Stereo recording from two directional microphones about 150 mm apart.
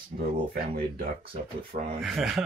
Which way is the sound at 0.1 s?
60° right (ahead or behind).